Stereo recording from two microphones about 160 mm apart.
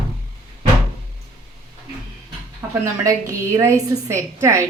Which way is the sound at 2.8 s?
20° right (ahead or behind).